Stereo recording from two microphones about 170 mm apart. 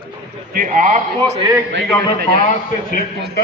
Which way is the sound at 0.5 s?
55° right (ahead or behind).